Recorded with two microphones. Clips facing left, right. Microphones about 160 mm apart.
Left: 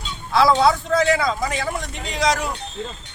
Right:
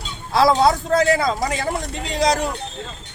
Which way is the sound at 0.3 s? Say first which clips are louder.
Right 1 dB; 40° right (ahead or behind).